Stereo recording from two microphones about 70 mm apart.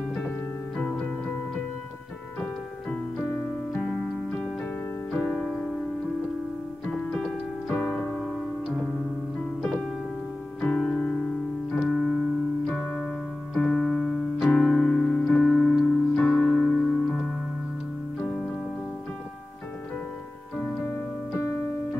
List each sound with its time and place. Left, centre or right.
0.7 s music: centre
3.2 s piano: left
3.7 s music: centre
7.2 s keyboard: left
10.6 s music: centre
11.7 s keyboard: centre
12.7 s keyboard: left
13.6 s electric piano: centre
15.8 s piano: centre
20.5 s keyboard: left